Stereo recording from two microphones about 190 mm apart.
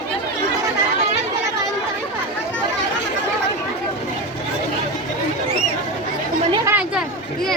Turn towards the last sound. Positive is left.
turn(degrees=-15)  # may be behind; listen again after turning